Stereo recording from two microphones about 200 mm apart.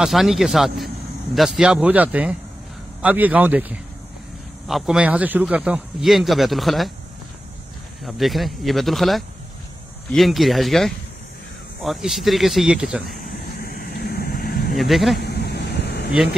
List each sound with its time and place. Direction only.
0.0 s a man's voice: centre (ahead or behind)
8.0 s speech: centre (ahead or behind)
13.2 s vehicle: 50° left (ahead or behind)
14.8 s speech: centre (ahead or behind)
15.1 s a sound: 55° left (ahead or behind)